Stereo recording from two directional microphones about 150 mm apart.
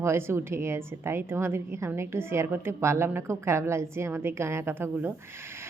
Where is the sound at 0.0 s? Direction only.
15° right (ahead or behind).